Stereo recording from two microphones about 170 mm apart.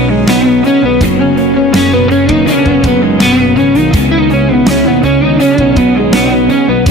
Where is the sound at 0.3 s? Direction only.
Centre (ahead or behind).